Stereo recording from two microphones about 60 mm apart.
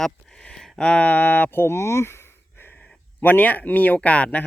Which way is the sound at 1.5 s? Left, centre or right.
Left.